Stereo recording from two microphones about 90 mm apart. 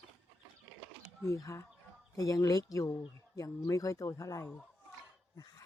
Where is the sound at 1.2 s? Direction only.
35° left (ahead or behind).